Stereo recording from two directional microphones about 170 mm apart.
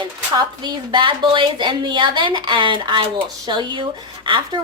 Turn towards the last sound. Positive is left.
turn(degrees=-30)  # may be behind; listen again after turning